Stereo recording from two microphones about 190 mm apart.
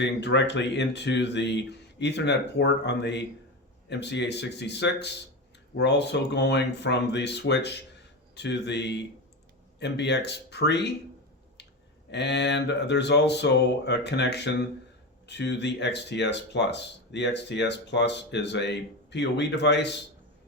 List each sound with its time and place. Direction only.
0.0 s speech: 65° left (ahead or behind)
12.1 s speech: 65° left (ahead or behind)